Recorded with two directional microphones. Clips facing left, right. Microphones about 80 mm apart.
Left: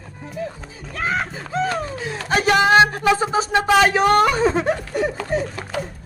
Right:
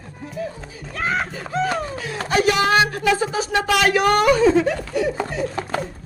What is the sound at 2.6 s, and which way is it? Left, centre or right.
Speech, left.